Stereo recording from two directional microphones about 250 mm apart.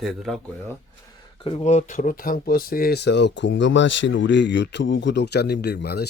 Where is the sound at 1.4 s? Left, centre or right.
Left.